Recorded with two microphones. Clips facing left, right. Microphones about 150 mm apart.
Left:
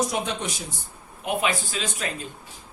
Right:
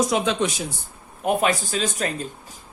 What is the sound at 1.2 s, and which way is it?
Speech, 45° right (ahead or behind).